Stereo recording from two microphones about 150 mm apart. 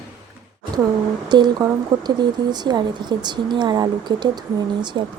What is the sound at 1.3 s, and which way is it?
Speech, 30° right (ahead or behind).